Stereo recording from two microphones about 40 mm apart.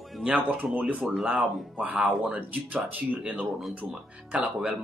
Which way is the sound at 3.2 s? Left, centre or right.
Right.